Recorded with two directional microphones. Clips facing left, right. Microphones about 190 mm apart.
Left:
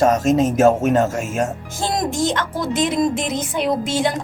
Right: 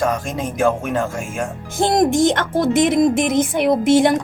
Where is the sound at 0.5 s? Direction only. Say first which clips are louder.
Left 4 dB; 40° left (ahead or behind).